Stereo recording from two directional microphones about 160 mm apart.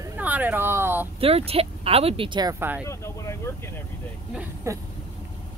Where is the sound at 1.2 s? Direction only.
40° right (ahead or behind).